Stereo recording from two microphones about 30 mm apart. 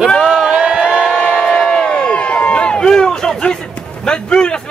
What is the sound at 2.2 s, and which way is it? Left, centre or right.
Crowd, left.